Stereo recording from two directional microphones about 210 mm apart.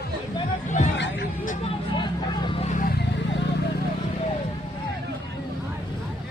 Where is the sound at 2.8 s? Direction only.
45° left (ahead or behind).